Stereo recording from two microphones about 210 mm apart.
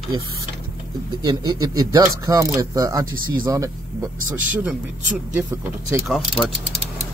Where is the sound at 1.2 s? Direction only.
20° right (ahead or behind); by 6.5 s centre (ahead or behind).